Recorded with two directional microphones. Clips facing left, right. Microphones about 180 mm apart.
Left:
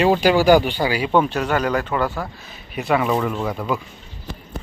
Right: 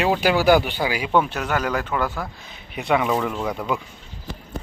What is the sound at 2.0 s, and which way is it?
Speech, 10° left (ahead or behind).